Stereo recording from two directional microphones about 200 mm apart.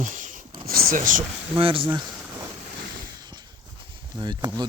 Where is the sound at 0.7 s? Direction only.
45° right (ahead or behind).